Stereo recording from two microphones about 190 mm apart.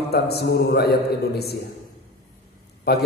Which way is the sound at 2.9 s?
60° left (ahead or behind).